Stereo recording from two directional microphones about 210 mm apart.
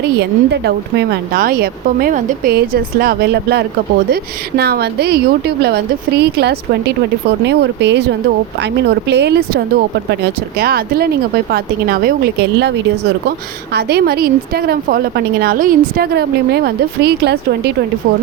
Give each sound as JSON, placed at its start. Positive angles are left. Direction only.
{"t": 0.2, "sound": "a woman's voice", "side_deg": -55}
{"t": 10.6, "sound": "a woman's voice", "side_deg": -50}